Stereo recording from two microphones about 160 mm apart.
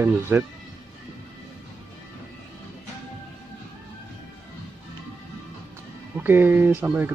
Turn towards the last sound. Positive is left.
turn(degrees=-10)  # may be behind; listen again after turning